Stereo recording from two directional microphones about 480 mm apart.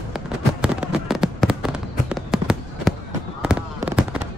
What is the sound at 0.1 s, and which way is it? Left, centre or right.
Fireworks, centre.